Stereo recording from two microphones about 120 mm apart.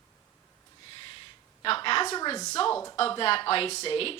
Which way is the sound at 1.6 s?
45° left (ahead or behind).